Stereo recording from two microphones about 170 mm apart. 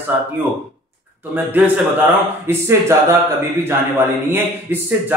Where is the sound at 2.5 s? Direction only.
15° right (ahead or behind).